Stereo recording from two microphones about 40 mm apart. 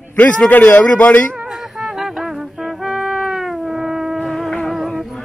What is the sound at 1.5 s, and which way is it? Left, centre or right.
Music, centre.